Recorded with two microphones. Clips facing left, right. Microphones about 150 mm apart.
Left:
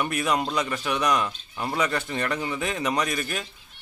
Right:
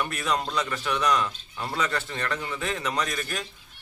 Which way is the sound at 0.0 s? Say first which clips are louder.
Left 3 dB; 15° left (ahead or behind).